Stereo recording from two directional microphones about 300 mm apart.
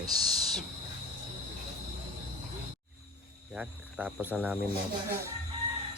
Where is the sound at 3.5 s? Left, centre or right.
Centre.